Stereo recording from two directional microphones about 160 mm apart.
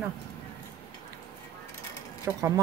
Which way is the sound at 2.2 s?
20° right (ahead or behind).